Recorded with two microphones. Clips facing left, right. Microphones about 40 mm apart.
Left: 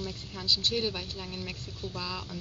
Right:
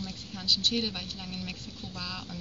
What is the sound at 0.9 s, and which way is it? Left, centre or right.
Speech, centre.